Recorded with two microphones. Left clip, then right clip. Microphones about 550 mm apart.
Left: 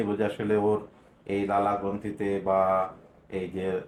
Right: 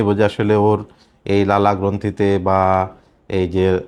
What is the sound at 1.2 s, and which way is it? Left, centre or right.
Speech, right.